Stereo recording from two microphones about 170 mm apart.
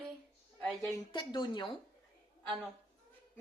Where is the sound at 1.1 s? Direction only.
25° left (ahead or behind).